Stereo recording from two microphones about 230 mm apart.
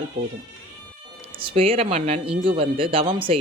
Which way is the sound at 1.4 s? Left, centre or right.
Right.